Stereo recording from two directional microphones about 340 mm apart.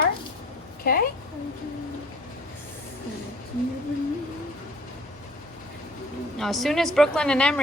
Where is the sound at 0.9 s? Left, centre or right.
Left.